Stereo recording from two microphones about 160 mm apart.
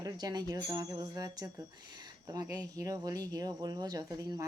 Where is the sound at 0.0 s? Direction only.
25° right (ahead or behind).